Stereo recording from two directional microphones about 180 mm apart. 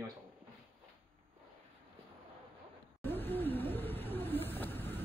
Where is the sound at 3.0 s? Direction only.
10° left (ahead or behind).